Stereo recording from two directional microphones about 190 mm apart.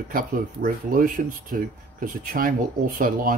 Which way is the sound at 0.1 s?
50° right (ahead or behind).